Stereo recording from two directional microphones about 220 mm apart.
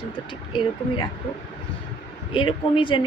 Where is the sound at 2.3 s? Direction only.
20° left (ahead or behind).